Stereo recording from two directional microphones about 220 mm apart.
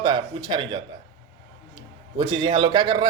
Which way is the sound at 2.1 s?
20° right (ahead or behind).